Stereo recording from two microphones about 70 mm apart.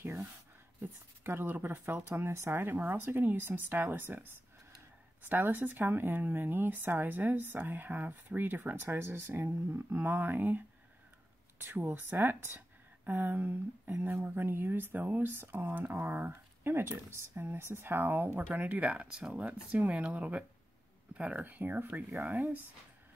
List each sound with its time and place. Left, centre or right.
0.0 s a sound: right
1.2 s speech: right
5.3 s speech: right
11.6 s a woman's voice: right